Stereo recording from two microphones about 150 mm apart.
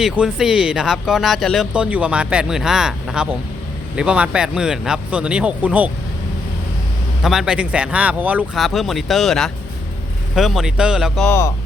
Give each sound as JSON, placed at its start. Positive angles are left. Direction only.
{"t": 0.0, "sound": "speech", "side_deg": -5}
{"t": 7.2, "sound": "speech", "side_deg": 0}
{"t": 11.3, "sound": "speech", "side_deg": 20}